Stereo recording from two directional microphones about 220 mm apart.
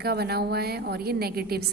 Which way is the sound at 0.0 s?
45° right (ahead or behind).